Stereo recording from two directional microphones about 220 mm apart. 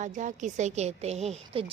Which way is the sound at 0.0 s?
35° right (ahead or behind).